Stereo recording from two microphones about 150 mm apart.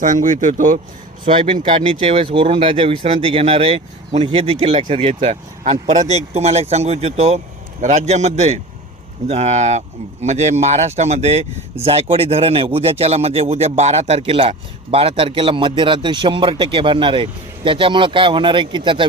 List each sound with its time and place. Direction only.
0.0 s speech: 60° right (ahead or behind)
1.2 s speech: 35° right (ahead or behind)